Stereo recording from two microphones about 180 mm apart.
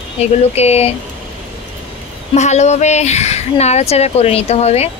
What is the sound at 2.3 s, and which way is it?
Speech, 40° left (ahead or behind).